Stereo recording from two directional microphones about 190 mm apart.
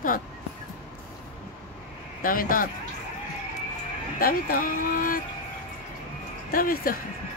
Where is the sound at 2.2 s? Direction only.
50° left (ahead or behind).